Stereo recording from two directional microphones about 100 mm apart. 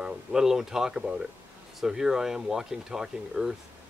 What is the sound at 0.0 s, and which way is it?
Speech, 5° right (ahead or behind).